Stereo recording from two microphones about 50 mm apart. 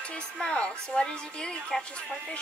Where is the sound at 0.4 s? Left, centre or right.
Centre.